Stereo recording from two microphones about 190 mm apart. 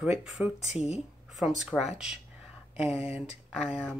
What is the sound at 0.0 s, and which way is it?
Speech, 5° right (ahead or behind).